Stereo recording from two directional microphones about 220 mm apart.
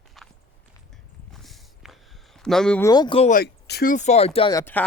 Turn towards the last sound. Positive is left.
turn(degrees=10)  # may be behind; listen again after turning